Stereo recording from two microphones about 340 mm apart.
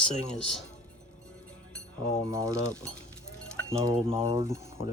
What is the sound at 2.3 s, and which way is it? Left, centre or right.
Speech, centre.